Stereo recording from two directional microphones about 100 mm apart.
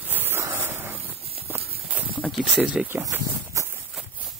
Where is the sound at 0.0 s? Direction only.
20° right (ahead or behind).